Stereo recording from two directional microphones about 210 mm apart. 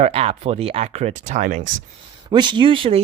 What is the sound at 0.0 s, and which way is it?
Speech, 30° right (ahead or behind).